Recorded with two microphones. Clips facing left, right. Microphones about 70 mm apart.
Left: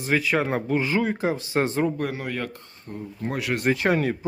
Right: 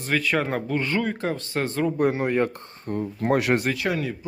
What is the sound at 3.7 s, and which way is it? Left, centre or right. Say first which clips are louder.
Speech: left 4 dB; left.